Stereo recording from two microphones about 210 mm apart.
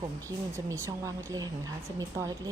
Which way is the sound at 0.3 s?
15° right (ahead or behind).